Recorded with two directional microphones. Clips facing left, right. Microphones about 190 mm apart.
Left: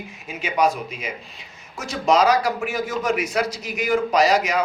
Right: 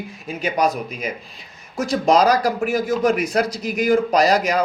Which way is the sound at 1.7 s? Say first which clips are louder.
Right 3 dB; 35° right (ahead or behind).